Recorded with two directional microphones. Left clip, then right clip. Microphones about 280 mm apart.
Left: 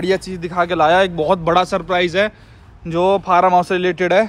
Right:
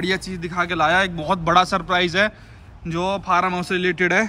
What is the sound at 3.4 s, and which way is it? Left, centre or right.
Speech, centre.